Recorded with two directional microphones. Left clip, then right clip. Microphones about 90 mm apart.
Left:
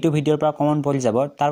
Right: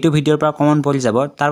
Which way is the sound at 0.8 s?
15° right (ahead or behind).